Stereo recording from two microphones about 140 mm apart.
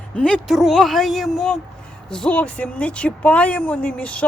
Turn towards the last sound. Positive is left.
turn(degrees=10)  # may be behind; listen again after turning